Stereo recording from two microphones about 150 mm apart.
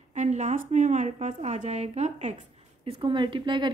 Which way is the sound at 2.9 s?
35° right (ahead or behind).